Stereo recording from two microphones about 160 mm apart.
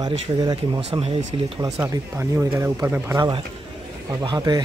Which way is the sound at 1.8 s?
15° right (ahead or behind).